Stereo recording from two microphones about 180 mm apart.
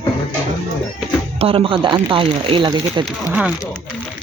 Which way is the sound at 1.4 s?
30° right (ahead or behind).